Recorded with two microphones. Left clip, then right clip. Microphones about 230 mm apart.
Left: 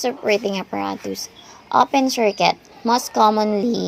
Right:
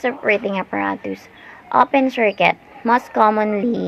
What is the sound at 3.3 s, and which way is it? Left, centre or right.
Speech, left.